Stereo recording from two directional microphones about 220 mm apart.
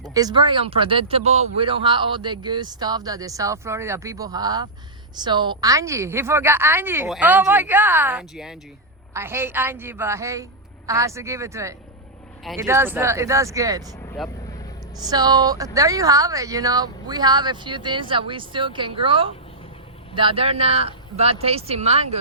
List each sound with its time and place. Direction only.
0.1 s speech: 15° right (ahead or behind)
14.9 s speech: 20° right (ahead or behind)